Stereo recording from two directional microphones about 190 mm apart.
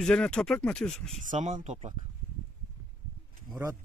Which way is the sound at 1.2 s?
40° right (ahead or behind).